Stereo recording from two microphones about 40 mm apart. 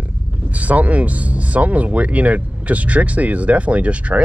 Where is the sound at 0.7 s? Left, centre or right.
Right.